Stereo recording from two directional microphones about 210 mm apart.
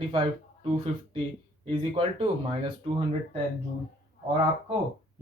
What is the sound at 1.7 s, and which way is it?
Speech, 25° right (ahead or behind).